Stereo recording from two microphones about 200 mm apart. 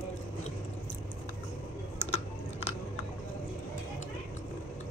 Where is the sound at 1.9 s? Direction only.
30° left (ahead or behind).